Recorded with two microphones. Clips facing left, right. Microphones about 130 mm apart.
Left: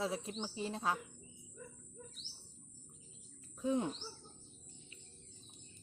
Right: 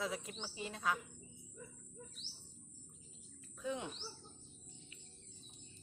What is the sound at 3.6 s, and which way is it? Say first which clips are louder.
Speech: left 7 dB; 35° left (ahead or behind).